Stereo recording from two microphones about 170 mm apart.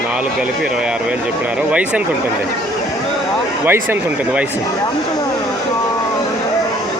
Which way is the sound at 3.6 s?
10° right (ahead or behind).